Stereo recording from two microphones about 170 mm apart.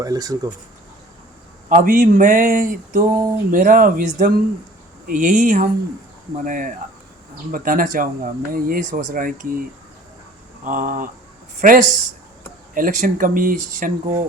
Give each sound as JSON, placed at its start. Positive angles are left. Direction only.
{"t": 0.0, "sound": "speech", "side_deg": -20}
{"t": 1.7, "sound": "speech", "side_deg": -55}